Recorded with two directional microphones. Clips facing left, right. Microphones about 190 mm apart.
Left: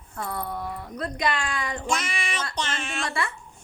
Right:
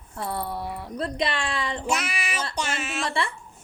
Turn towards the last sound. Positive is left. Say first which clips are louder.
# right 2 dB
turn(degrees=-5)  # may be behind; listen again after turning